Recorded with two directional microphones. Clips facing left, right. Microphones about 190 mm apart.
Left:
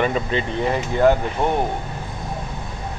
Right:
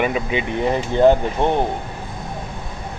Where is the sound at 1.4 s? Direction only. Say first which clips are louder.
Right 2 dB; 25° right (ahead or behind).